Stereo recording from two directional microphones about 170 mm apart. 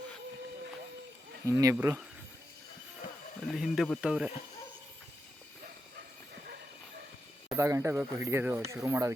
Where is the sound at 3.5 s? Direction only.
Centre (ahead or behind).